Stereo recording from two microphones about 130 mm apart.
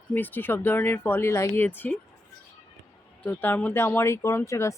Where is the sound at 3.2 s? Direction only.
15° left (ahead or behind).